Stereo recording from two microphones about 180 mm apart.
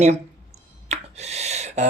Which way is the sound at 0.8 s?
40° right (ahead or behind).